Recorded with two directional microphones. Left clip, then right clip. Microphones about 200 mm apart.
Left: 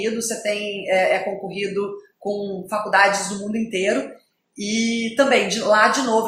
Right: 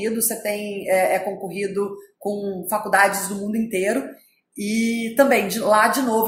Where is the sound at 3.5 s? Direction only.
50° right (ahead or behind).